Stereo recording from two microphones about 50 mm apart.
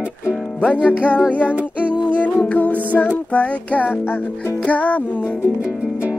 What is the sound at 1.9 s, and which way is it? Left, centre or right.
Music, left.